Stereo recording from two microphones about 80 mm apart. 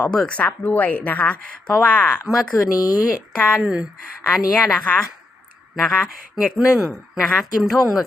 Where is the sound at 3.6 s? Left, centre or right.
Centre.